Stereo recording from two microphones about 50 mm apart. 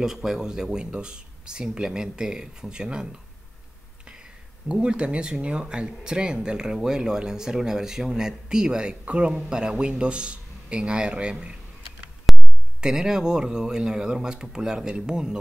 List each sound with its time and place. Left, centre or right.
0.0 s speech: centre
12.3 s a sound: centre
12.8 s speech: centre